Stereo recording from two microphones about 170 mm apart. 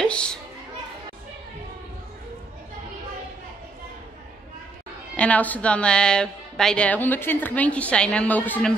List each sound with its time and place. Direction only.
0.0 s children playing: 5° left (ahead or behind)
5.1 s a woman's voice: 10° left (ahead or behind)